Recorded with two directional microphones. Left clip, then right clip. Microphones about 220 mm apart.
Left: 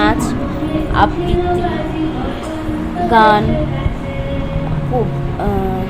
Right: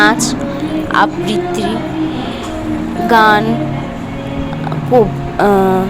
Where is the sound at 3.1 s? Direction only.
30° right (ahead or behind).